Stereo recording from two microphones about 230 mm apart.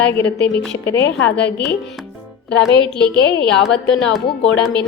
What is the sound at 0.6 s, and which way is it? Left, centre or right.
Speech, centre.